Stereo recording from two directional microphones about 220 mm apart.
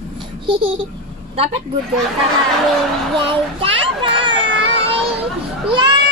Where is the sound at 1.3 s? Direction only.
25° right (ahead or behind).